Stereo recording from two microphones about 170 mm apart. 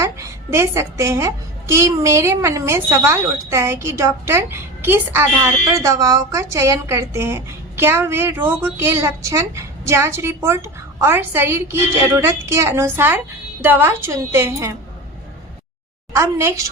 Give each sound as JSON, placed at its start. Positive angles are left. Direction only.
{"t": 0.0, "sound": "a woman's voice", "side_deg": -15}
{"t": 16.1, "sound": "a woman's voice", "side_deg": -15}